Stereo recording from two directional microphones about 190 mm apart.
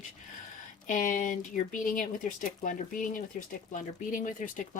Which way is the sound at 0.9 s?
45° left (ahead or behind).